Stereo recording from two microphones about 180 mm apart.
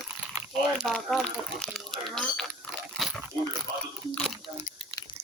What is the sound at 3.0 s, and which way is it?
Pig, centre (ahead or behind).